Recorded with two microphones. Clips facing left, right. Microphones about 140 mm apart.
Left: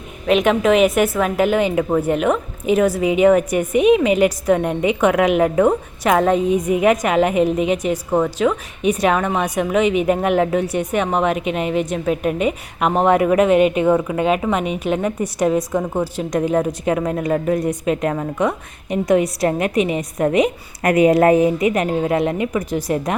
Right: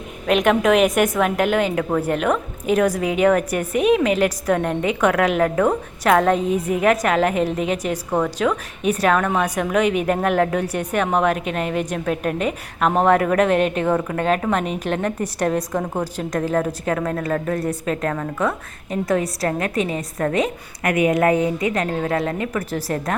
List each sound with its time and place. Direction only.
0.3 s a woman's voice: centre (ahead or behind)
16.3 s a woman's voice: 15° left (ahead or behind)
20.8 s a woman's voice: 35° left (ahead or behind); by 23.1 s 15° left (ahead or behind)